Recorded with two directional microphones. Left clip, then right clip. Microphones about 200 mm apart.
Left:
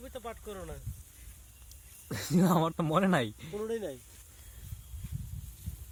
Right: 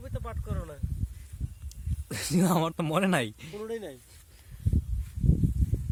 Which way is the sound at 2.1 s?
20° right (ahead or behind).